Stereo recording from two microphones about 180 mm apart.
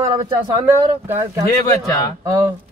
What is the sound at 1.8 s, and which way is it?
Speech, 20° left (ahead or behind).